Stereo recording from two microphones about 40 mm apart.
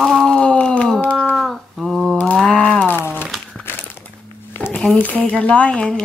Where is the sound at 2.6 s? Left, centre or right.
Left.